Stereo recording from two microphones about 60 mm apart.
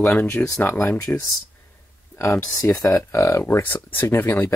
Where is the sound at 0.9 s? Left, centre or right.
Left.